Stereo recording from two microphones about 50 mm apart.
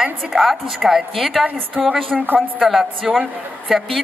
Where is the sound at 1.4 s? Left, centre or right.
Right.